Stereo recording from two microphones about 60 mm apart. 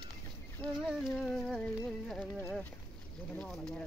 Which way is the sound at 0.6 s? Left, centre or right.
Left.